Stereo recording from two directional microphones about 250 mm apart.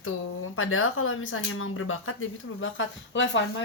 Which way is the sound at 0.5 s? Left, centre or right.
Left.